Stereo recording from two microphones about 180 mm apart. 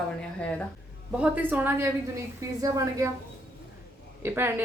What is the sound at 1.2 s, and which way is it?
A woman's voice, 10° right (ahead or behind).